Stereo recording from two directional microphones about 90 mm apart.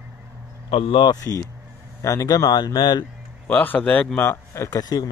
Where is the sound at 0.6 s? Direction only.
85° left.